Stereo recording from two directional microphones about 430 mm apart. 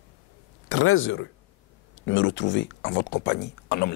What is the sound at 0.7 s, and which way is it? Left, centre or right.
Speech, left.